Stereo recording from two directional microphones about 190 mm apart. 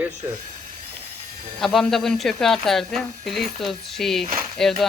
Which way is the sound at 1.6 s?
Centre (ahead or behind).